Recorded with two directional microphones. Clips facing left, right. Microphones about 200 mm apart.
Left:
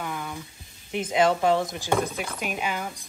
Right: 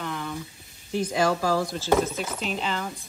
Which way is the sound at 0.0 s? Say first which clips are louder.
Right 1 dB; 10° left (ahead or behind).